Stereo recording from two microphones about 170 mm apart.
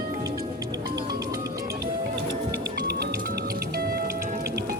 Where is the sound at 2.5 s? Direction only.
75° right (ahead or behind).